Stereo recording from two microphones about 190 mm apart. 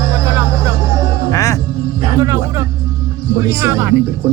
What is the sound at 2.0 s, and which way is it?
Music, 15° right (ahead or behind).